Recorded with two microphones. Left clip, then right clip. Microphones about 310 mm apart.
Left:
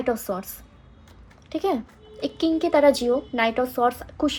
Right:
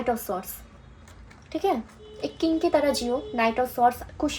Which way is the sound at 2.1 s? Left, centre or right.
Left.